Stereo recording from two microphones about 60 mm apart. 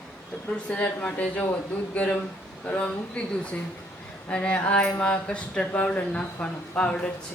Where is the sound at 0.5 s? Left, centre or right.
Left.